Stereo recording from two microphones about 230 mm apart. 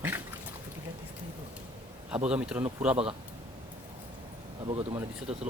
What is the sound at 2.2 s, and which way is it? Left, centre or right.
Speech, centre.